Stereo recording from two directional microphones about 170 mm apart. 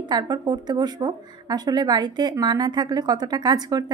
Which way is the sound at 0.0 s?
25° right (ahead or behind).